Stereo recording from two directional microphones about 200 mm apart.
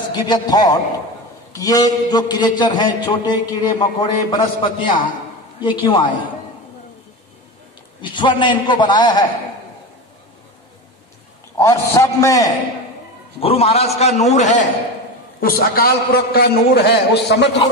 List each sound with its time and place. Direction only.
0.1 s a man's voice: 20° left (ahead or behind)
8.0 s a man's voice: 25° left (ahead or behind)
11.5 s a man's voice: 15° left (ahead or behind)
13.4 s a man's voice: 30° left (ahead or behind)
15.4 s a man's voice: 50° left (ahead or behind)